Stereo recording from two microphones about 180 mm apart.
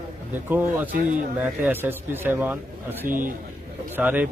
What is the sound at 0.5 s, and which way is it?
A man's voice, 10° right (ahead or behind).